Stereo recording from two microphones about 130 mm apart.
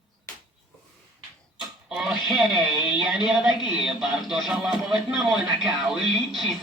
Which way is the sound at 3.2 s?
5° right (ahead or behind).